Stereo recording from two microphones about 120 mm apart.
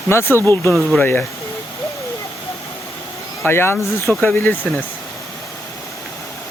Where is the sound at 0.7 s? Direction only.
5° left (ahead or behind).